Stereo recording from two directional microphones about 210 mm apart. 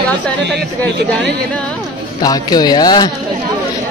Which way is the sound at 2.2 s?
20° left (ahead or behind).